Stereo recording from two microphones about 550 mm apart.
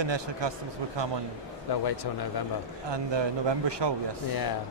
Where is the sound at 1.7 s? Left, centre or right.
Left.